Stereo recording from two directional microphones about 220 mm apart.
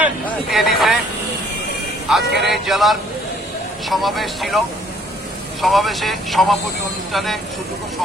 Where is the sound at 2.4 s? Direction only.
Centre (ahead or behind).